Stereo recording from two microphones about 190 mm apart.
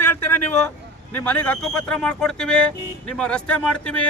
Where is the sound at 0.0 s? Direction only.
10° left (ahead or behind).